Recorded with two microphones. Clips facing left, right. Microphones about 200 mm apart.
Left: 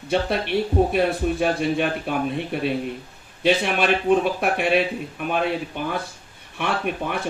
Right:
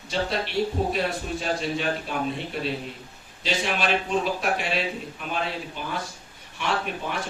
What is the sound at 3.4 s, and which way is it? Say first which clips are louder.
A man's voice: left 6 dB; 55° left (ahead or behind).